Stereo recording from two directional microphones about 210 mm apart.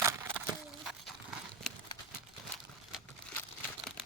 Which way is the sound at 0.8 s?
Centre (ahead or behind).